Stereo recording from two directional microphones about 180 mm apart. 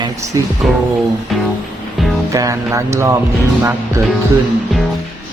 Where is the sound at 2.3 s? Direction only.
15° right (ahead or behind).